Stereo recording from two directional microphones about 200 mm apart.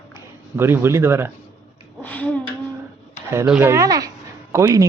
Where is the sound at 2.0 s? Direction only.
5° left (ahead or behind).